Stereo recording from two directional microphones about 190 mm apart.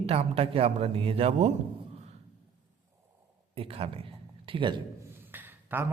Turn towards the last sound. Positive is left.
turn(degrees=-10)  # may be behind; listen again after turning